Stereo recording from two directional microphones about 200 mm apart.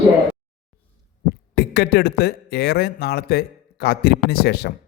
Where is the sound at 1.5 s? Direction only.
55° left (ahead or behind).